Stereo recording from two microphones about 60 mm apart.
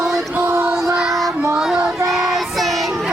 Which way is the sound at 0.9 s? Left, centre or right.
Centre.